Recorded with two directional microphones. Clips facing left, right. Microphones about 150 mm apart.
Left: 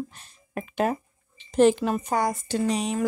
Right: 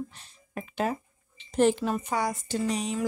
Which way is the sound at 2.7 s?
85° left.